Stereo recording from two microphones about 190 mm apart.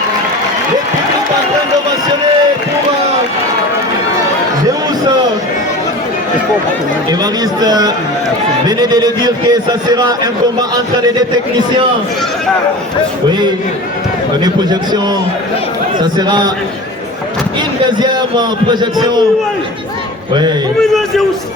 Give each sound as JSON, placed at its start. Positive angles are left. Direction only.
{"t": 7.6, "sound": "a man's voice", "side_deg": -20}
{"t": 14.4, "sound": "a man's voice", "side_deg": -20}
{"t": 18.0, "sound": "a man's voice", "side_deg": -20}
{"t": 20.8, "sound": "a man's voice", "side_deg": 0}